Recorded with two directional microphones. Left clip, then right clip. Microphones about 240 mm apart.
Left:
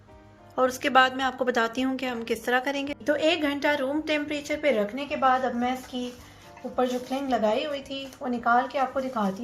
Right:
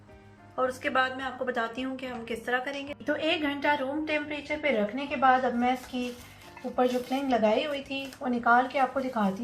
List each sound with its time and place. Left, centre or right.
0.5 s a woman's voice: left
6.7 s speech: left